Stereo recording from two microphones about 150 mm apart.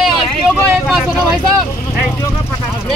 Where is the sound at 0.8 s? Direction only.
5° right (ahead or behind).